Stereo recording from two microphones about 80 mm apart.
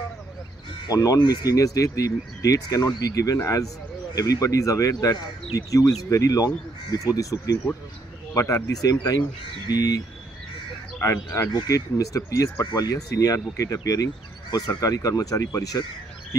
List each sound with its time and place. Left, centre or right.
0.8 s speech: left
9.7 s speech: left
11.2 s speech: left